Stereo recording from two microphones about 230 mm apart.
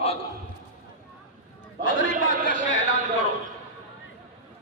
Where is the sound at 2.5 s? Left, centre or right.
Left.